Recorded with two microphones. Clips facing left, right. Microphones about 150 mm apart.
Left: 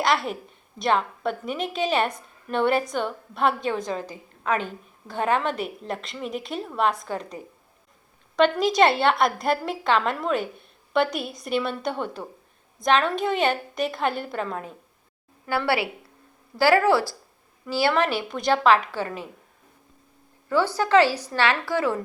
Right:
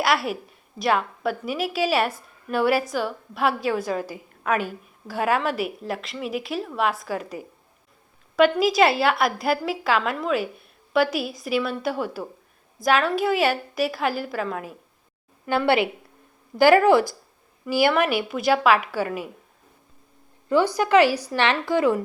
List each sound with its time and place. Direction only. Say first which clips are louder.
0.0 s a woman's voice: right 1 dB; 5° right (ahead or behind)
15.4 s a woman's voice: right 4 dB; 20° right (ahead or behind)
20.5 s a woman's voice: right 2 dB; 15° right (ahead or behind)